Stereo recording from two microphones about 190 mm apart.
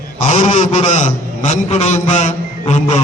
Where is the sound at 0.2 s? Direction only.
40° left (ahead or behind).